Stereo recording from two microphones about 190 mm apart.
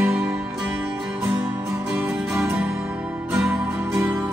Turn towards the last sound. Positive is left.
turn(degrees=-10)  # may be behind; listen again after turning